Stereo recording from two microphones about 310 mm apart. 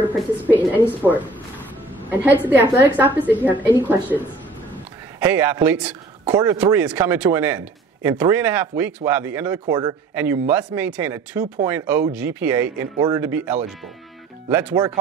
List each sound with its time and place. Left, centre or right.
0.0 s a woman's voice: centre